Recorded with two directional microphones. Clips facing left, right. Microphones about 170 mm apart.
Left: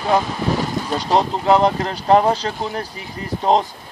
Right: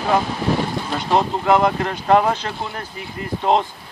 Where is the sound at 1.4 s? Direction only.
30° left (ahead or behind).